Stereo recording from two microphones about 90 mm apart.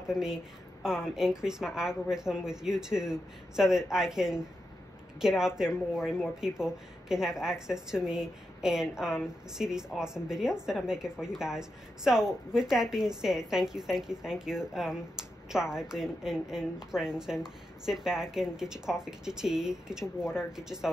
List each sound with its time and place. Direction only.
0.1 s a woman's voice: 5° right (ahead or behind)